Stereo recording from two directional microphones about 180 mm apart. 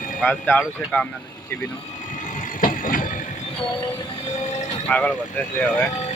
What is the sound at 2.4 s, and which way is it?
Vehicle, 50° left (ahead or behind).